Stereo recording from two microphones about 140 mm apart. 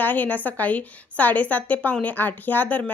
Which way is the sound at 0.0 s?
15° left (ahead or behind).